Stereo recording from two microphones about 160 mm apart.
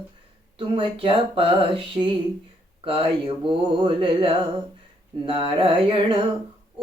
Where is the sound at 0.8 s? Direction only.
35° right (ahead or behind).